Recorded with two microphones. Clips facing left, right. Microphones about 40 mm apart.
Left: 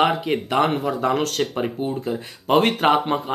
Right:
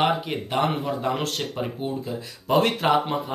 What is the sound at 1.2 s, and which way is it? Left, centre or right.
Speech, left.